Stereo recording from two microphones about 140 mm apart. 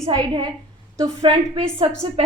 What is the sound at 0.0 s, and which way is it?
A woman's voice, 25° right (ahead or behind).